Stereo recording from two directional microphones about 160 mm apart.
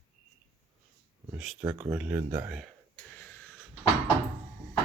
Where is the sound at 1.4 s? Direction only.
5° right (ahead or behind).